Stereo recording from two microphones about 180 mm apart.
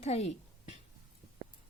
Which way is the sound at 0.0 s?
40° left (ahead or behind).